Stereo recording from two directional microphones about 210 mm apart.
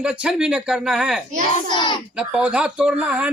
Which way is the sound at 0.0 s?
5° right (ahead or behind).